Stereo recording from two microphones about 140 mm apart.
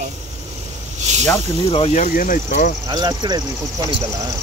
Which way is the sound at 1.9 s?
70° left (ahead or behind).